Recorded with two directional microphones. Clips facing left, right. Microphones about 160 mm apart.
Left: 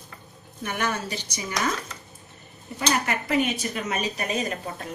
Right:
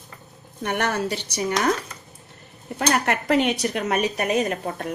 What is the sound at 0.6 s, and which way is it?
Speech, 65° right (ahead or behind).